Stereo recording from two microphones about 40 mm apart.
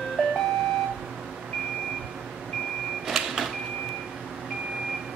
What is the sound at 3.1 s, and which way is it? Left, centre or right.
Vehicle, centre.